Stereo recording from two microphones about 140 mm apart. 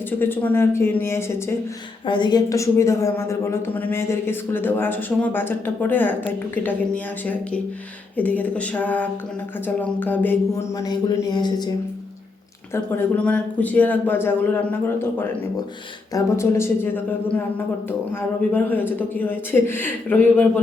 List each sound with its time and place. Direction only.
0.2 s a woman's voice: 15° left (ahead or behind)
2.0 s a woman's voice: 35° left (ahead or behind)
12.7 s a woman's voice: 15° left (ahead or behind)